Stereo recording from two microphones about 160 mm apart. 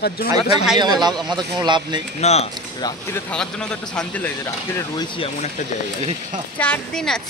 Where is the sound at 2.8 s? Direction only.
25° left (ahead or behind).